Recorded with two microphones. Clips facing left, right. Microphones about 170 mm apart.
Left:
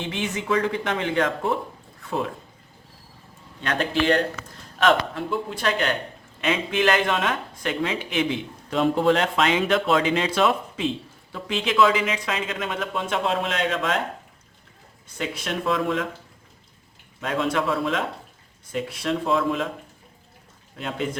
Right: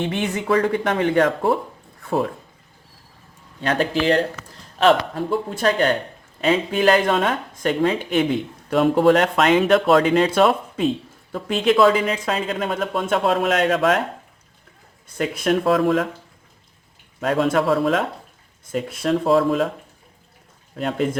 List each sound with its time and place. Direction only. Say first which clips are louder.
0.0 s speech: right 5 dB; 55° right (ahead or behind)
2.0 s speech: right 5 dB; 40° right (ahead or behind)
3.6 s speech: right 3 dB; 35° right (ahead or behind); by 14.0 s 55° right (ahead or behind)
15.2 s speech: right 8 dB; 45° right (ahead or behind)
17.2 s speech: right 5 dB; 45° right (ahead or behind)
20.7 s speech: right 6 dB; 45° right (ahead or behind)